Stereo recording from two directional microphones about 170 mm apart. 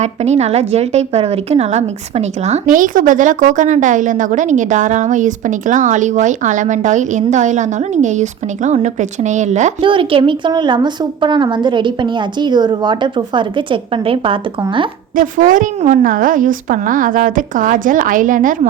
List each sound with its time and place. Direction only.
0.0 s a woman's voice: 40° right (ahead or behind)
9.8 s a woman's voice: 30° right (ahead or behind)
15.1 s a woman's voice: 50° right (ahead or behind)